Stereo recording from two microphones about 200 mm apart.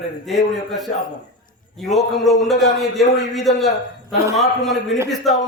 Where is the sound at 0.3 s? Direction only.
Centre (ahead or behind).